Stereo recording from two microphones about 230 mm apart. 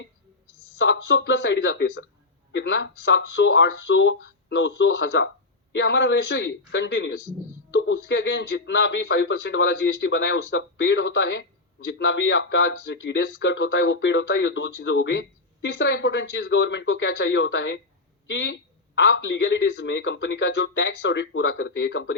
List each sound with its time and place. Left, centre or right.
0.8 s speech: left